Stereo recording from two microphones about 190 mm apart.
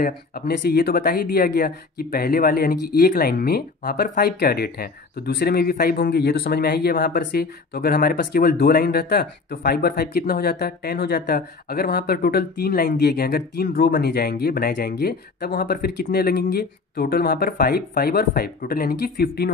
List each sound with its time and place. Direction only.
0.0 s speech: 55° left (ahead or behind)